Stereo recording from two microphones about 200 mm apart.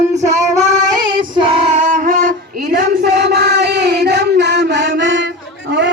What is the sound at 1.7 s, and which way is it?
Music, 40° right (ahead or behind).